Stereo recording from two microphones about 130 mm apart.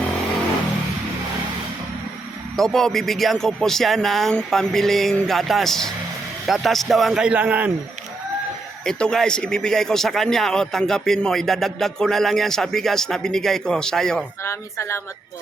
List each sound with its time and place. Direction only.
2.6 s a man's voice: 5° left (ahead or behind)
8.8 s a man's voice: 5° left (ahead or behind)
14.4 s speech: 20° left (ahead or behind)